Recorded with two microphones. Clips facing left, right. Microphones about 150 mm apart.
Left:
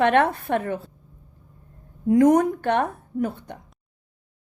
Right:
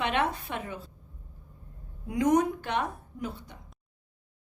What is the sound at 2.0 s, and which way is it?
A woman's voice, 50° left (ahead or behind).